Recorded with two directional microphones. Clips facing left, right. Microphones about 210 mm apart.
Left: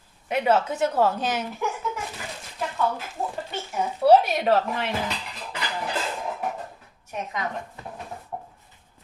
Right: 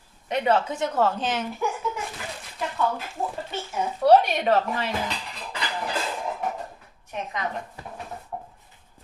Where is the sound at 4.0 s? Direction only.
5° left (ahead or behind).